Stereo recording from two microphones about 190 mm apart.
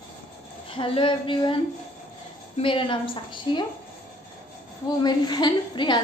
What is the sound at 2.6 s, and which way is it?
A woman's voice, 25° left (ahead or behind).